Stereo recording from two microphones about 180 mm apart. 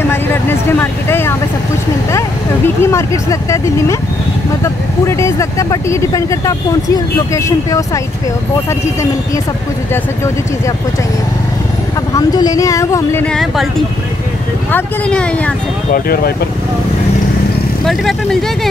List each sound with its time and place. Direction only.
0.1 s vehicle: 10° left (ahead or behind)
2.1 s speech: 15° left (ahead or behind)
5.0 s speech: 15° left (ahead or behind)
12.1 s speech: 20° left (ahead or behind)
15.9 s speech: 55° left (ahead or behind)
17.8 s speech: centre (ahead or behind)